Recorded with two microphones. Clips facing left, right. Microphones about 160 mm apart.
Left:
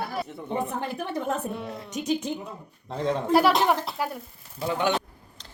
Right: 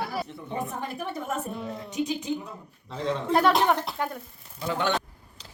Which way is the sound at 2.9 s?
50° left (ahead or behind).